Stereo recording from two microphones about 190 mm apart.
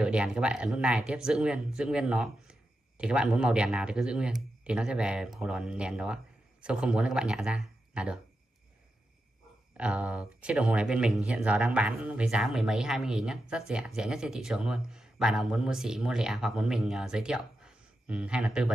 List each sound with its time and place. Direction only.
0.0 s speech: 5° right (ahead or behind)
9.8 s speech: 5° right (ahead or behind)